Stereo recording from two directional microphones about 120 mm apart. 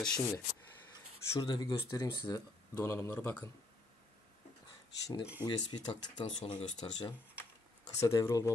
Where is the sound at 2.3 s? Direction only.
20° left (ahead or behind).